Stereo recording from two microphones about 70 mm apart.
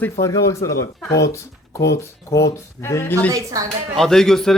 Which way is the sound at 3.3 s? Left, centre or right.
Right.